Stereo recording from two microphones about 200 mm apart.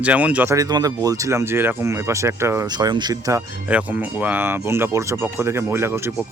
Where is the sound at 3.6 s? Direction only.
5° right (ahead or behind).